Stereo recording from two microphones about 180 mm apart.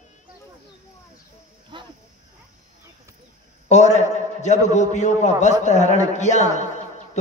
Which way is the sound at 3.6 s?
40° left (ahead or behind).